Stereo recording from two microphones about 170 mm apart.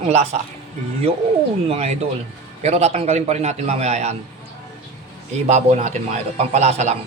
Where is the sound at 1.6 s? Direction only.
35° right (ahead or behind).